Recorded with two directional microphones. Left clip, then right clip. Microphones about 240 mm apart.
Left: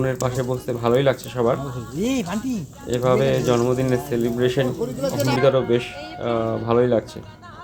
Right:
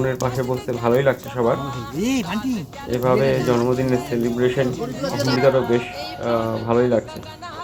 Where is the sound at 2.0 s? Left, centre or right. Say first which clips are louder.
Even; left.